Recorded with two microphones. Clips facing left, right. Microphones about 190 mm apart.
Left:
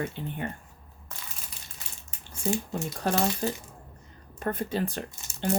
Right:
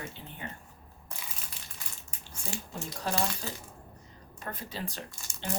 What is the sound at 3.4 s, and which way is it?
Speech, 55° left (ahead or behind).